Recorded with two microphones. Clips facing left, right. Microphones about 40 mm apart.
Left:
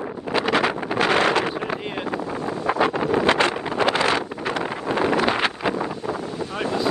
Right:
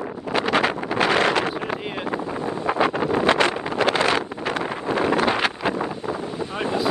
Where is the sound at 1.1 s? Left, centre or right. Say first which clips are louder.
Left 1 dB; left.